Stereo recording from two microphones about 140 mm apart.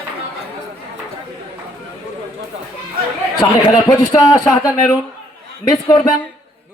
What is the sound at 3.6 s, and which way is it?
Speech, 25° left (ahead or behind).